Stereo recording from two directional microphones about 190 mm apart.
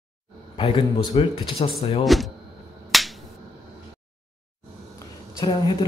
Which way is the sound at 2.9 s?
Centre (ahead or behind).